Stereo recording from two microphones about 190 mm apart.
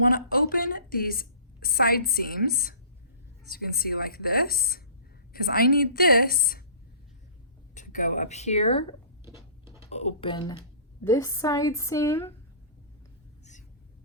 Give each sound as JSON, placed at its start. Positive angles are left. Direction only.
{"t": 0.0, "sound": "a woman's voice", "side_deg": 50}
{"t": 7.7, "sound": "a woman's voice", "side_deg": 40}